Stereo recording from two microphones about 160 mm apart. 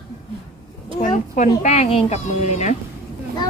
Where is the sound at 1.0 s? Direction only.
50° left (ahead or behind).